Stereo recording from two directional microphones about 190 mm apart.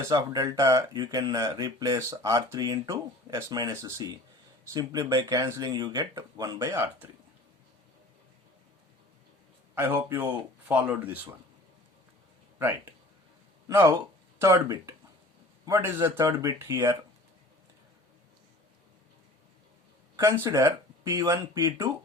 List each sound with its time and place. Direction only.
0.0 s speech: 20° right (ahead or behind)
9.7 s speech: 10° right (ahead or behind)
13.7 s speech: 15° right (ahead or behind)
20.1 s speech: 15° right (ahead or behind)